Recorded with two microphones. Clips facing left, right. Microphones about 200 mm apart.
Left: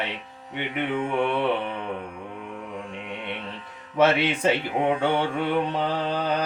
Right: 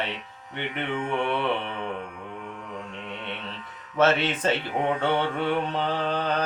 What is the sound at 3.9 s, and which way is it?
Music, 10° left (ahead or behind).